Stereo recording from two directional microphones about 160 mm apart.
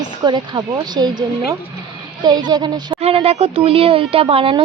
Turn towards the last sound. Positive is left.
turn(degrees=-35)  # may be behind; listen again after turning